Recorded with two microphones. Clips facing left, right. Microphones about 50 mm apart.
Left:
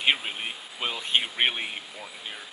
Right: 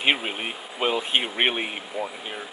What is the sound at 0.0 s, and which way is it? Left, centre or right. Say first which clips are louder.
Speech: right 2 dB; centre.